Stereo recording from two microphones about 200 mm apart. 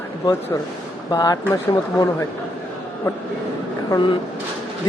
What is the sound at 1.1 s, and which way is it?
Speech, 20° left (ahead or behind).